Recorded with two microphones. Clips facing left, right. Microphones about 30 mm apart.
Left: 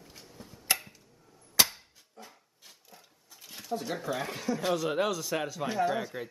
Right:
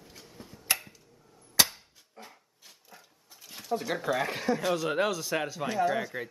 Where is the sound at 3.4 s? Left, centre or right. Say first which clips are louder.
Right 1 dB; centre.